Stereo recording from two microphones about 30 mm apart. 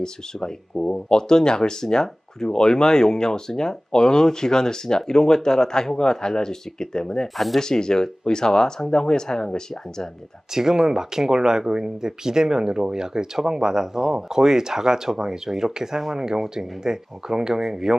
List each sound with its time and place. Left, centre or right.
0.0 s speech: left
7.3 s speech: centre
7.6 s speech: left
10.5 s speech: centre